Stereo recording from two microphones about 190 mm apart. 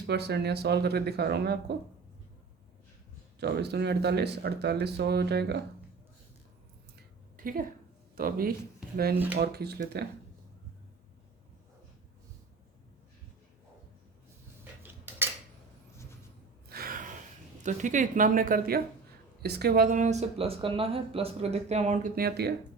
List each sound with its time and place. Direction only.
0.1 s speech: 60° right (ahead or behind)
3.4 s speech: 60° right (ahead or behind)
8.1 s a man's voice: 50° right (ahead or behind)
14.6 s cutlery: 10° right (ahead or behind)
16.6 s gasp: 50° right (ahead or behind)
17.6 s speech: 40° right (ahead or behind); by 22.5 s 55° right (ahead or behind)